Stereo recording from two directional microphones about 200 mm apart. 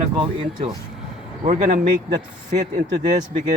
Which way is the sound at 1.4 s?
40° right (ahead or behind).